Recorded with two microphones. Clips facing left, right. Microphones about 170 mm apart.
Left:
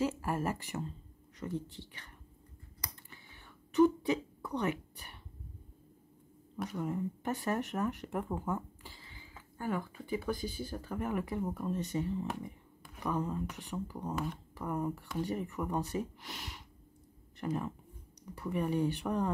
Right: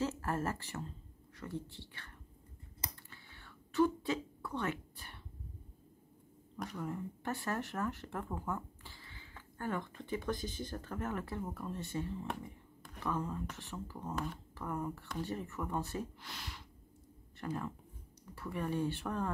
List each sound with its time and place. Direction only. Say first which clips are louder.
0.0 s speech: left 3 dB; 10° left (ahead or behind)
3.1 s whispering: left 1 dB; 15° left (ahead or behind)
6.8 s speech: left 6 dB; 20° left (ahead or behind)
14.1 s speech: left 2 dB; 5° left (ahead or behind)
14.5 s speech: left 5 dB; 15° left (ahead or behind)